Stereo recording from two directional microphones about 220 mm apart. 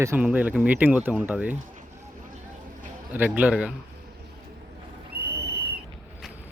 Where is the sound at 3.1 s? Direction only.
10° right (ahead or behind).